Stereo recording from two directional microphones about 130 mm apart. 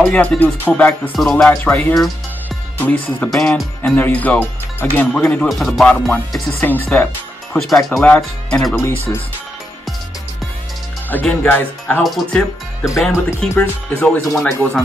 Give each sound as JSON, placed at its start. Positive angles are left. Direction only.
{"t": 0.0, "sound": "speech", "side_deg": 10}
{"t": 5.3, "sound": "speech", "side_deg": 5}
{"t": 7.5, "sound": "speech", "side_deg": 0}
{"t": 8.8, "sound": "speech", "side_deg": 20}
{"t": 11.1, "sound": "speech", "side_deg": 15}
{"t": 12.0, "sound": "speech", "side_deg": 0}